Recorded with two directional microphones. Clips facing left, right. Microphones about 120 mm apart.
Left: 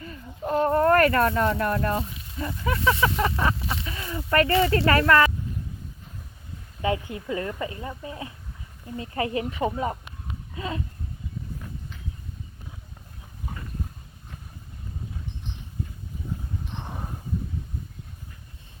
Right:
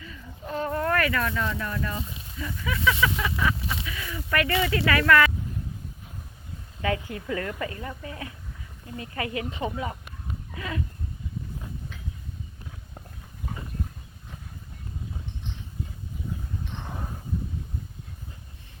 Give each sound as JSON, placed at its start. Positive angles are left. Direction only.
{"t": 0.0, "sound": "fowl", "side_deg": 45}
{"t": 2.4, "sound": "speech", "side_deg": 40}
{"t": 6.8, "sound": "a woman's voice", "side_deg": 25}